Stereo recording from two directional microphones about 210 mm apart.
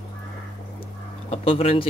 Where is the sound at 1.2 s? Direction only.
30° left (ahead or behind).